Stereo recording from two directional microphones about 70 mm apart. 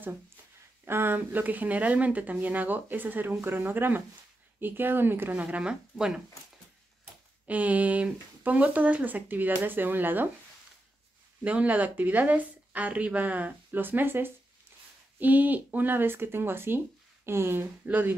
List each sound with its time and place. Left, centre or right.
0.8 s speech: right
5.4 s speech: centre
7.4 s speech: right
11.4 s speech: right
17.8 s speech: right